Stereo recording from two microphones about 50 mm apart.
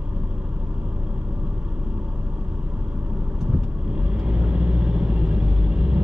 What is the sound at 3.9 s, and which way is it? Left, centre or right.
Vehicle, centre.